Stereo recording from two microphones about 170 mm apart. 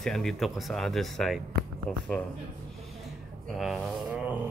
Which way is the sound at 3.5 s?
Centre (ahead or behind).